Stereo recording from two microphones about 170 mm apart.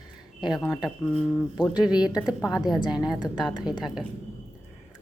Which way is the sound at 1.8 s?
5° right (ahead or behind).